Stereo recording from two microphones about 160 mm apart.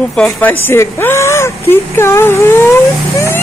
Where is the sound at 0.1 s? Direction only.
5° left (ahead or behind).